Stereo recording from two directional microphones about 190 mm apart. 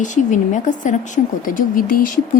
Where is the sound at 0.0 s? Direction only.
40° left (ahead or behind).